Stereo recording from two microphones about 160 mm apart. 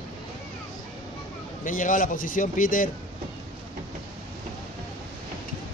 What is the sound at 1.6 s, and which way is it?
A man's voice, 55° left (ahead or behind).